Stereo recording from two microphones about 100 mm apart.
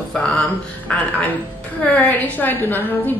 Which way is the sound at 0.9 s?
10° left (ahead or behind).